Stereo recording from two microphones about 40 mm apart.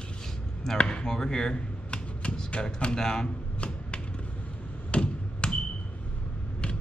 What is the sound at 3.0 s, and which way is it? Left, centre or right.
Speech, centre.